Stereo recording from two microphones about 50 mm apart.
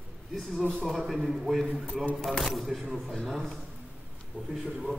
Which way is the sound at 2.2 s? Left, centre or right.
Centre.